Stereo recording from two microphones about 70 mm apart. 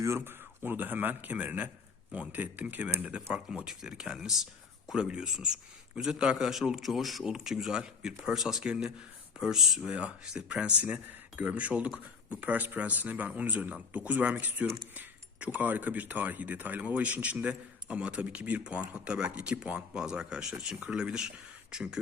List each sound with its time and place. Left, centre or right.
0.0 s speech: right; by 3.2 s centre
3.5 s speech: centre
9.9 s speech: centre